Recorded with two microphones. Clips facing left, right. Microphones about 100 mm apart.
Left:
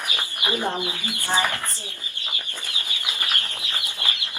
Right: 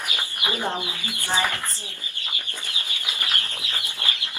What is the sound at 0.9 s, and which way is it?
Speech, 20° left (ahead or behind).